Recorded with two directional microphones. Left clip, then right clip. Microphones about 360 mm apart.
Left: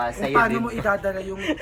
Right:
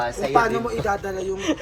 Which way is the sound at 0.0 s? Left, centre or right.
Centre.